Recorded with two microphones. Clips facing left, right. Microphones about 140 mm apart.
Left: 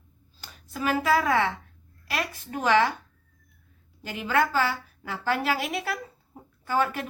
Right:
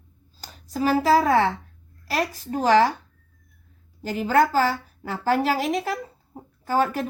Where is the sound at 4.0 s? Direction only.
40° right (ahead or behind).